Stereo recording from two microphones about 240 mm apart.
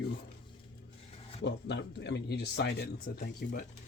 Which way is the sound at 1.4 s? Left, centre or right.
Left.